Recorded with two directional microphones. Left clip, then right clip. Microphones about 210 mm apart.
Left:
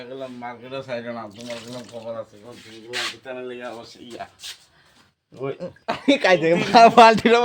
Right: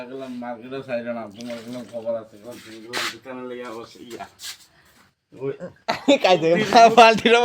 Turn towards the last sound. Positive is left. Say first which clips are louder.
# even
turn(degrees=10)  # may be behind; listen again after turning